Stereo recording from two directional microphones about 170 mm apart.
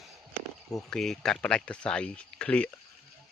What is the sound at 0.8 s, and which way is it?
Speech, centre (ahead or behind).